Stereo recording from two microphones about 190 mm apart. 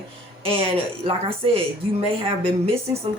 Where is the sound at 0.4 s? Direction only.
30° right (ahead or behind).